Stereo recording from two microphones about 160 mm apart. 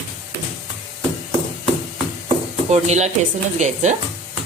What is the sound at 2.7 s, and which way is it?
Speech, 45° right (ahead or behind).